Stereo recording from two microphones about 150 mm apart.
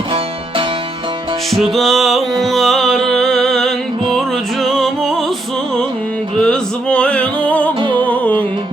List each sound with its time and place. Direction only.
1.7 s music: centre (ahead or behind)
6.3 s music: 5° left (ahead or behind)
7.8 s music: 35° right (ahead or behind)
8.0 s music: 10° left (ahead or behind)